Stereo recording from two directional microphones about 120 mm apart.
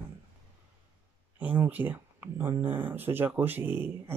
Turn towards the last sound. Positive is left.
turn(degrees=-20)  # may be behind; listen again after turning